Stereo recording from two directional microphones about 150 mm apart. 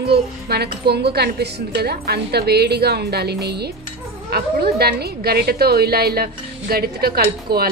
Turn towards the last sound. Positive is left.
turn(degrees=-90)